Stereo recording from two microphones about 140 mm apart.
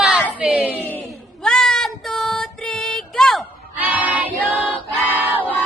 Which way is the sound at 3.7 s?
10° right (ahead or behind).